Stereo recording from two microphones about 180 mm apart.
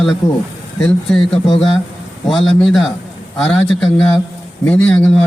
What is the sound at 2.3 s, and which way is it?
Speech, 5° left (ahead or behind).